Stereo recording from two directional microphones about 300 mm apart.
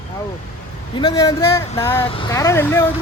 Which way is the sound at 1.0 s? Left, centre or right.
Centre.